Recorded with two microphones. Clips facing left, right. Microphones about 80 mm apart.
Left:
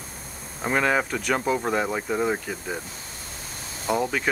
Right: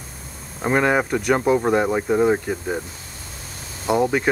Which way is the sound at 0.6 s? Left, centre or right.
Centre.